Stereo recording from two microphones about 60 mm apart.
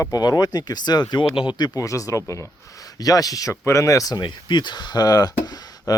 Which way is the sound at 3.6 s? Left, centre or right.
Left.